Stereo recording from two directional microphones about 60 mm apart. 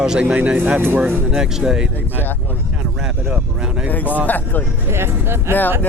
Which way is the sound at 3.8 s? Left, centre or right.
Left.